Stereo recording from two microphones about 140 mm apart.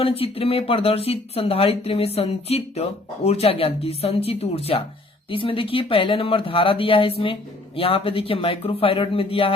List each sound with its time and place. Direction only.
0.0 s speech: 45° left (ahead or behind)